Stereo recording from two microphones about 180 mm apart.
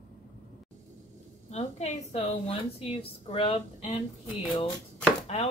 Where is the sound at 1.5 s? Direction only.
40° left (ahead or behind).